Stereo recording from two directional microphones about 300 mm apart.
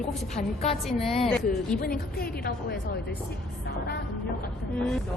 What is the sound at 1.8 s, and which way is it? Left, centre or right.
Speech, left.